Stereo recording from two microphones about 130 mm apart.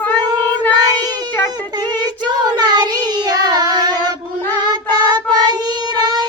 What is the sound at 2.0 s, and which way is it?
Child singing, 35° right (ahead or behind).